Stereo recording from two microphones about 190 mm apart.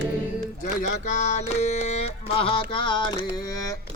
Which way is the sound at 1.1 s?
40° left (ahead or behind).